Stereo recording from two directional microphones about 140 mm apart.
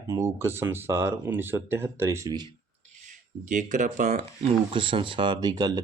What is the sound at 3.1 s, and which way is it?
Speech, 65° right (ahead or behind).